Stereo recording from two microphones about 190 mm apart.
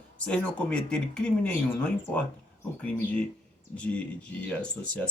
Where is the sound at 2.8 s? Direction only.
5° left (ahead or behind).